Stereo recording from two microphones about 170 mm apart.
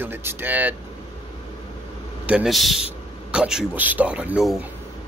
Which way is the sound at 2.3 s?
5° right (ahead or behind).